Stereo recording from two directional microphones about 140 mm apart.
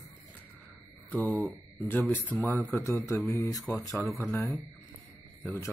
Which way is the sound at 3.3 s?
20° left (ahead or behind).